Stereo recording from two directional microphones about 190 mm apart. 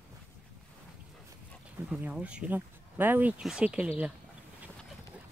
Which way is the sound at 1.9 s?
5° right (ahead or behind).